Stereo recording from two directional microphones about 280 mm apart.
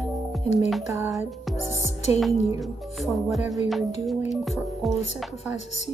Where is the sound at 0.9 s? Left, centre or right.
Centre.